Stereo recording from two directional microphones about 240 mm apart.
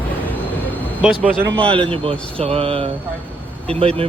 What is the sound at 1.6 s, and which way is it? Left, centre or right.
Speech, right.